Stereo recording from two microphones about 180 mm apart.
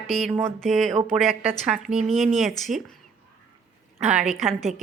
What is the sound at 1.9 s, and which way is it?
Speech, 35° right (ahead or behind).